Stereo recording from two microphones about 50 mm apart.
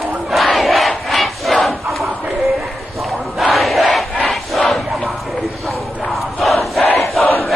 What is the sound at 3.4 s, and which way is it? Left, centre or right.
Battle cry, centre.